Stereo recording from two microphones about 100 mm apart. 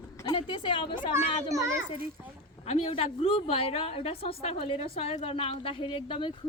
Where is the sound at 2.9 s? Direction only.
75° left (ahead or behind).